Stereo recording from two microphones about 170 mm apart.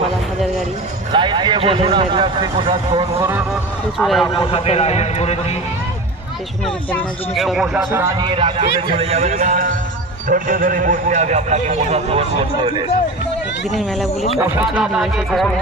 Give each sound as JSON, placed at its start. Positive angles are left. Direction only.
{"t": 1.1, "sound": "speech", "side_deg": -25}
{"t": 4.0, "sound": "speech", "side_deg": 0}
{"t": 4.5, "sound": "speech", "side_deg": 35}
{"t": 7.3, "sound": "speech", "side_deg": 0}
{"t": 8.2, "sound": "a man's voice", "side_deg": -30}
{"t": 10.2, "sound": "a man's voice", "side_deg": -55}
{"t": 14.6, "sound": "speech", "side_deg": -5}